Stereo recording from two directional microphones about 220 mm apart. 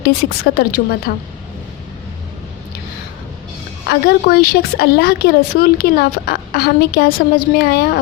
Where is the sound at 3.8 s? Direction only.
45° left (ahead or behind).